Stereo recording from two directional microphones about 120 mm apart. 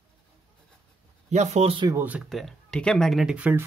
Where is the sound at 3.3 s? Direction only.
10° right (ahead or behind).